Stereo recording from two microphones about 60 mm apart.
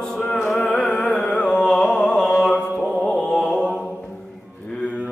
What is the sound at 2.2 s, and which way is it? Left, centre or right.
Music, centre.